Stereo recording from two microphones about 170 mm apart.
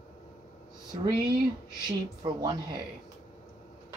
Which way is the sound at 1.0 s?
25° right (ahead or behind).